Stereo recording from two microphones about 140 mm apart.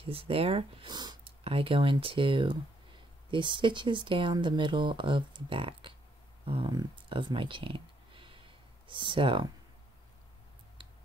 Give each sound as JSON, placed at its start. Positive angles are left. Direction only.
{"t": 0.0, "sound": "speech", "side_deg": -40}
{"t": 1.4, "sound": "speech", "side_deg": -40}